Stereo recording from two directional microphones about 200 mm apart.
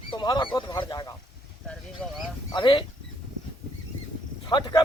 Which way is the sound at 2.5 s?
25° left (ahead or behind).